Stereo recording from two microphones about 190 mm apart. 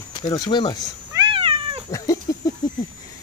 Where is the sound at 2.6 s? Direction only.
20° left (ahead or behind).